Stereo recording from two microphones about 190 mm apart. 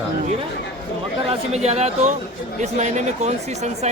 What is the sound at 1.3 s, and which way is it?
Speech, 35° right (ahead or behind).